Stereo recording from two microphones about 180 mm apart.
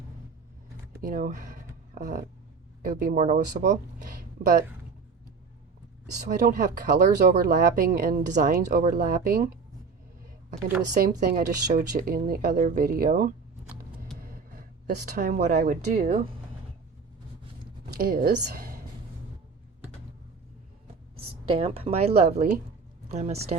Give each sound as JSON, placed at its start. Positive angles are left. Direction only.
{"t": 1.0, "sound": "speech", "side_deg": -50}
{"t": 6.2, "sound": "speech", "side_deg": -50}
{"t": 11.0, "sound": "speech", "side_deg": -50}
{"t": 14.8, "sound": "speech", "side_deg": -55}
{"t": 17.9, "sound": "speech", "side_deg": -55}
{"t": 21.4, "sound": "speech", "side_deg": -30}
{"t": 22.4, "sound": "speech", "side_deg": -50}
{"t": 23.0, "sound": "speech", "side_deg": -40}